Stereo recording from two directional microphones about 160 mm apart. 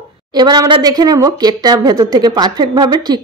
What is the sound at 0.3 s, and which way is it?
A woman's voice, 25° right (ahead or behind).